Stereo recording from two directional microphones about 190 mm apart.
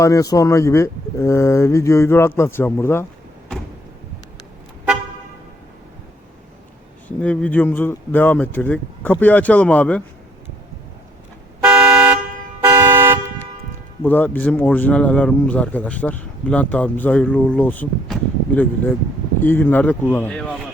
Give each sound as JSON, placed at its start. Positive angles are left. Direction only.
{"t": 0.0, "sound": "speech", "side_deg": 15}
{"t": 7.2, "sound": "speech", "side_deg": 10}
{"t": 11.6, "sound": "car", "side_deg": -10}
{"t": 12.6, "sound": "toot", "side_deg": -10}
{"t": 14.0, "sound": "speech", "side_deg": 10}